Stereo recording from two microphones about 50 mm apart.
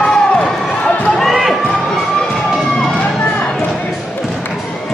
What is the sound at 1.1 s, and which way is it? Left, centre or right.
Run, centre.